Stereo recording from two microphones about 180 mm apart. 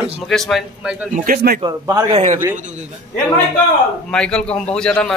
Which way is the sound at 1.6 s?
25° right (ahead or behind).